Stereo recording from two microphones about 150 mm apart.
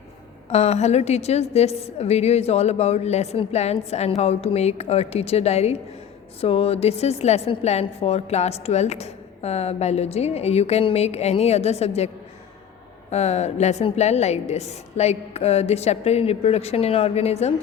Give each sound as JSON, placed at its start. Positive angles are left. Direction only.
{"t": 0.5, "sound": "a woman's voice", "side_deg": 45}